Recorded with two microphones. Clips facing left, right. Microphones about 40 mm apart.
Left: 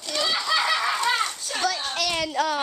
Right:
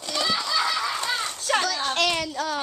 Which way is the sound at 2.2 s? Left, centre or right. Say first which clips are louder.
Left 4 dB; left.